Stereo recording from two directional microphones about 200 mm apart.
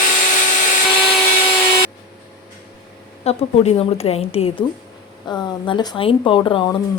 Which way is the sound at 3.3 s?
30° left (ahead or behind).